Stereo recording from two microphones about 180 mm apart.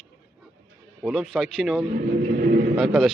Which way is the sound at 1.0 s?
Centre (ahead or behind).